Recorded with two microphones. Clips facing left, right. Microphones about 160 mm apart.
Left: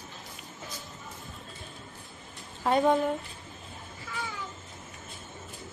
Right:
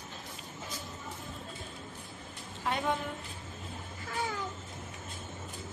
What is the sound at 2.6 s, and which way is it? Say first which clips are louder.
Speech: left 8 dB; 40° left (ahead or behind).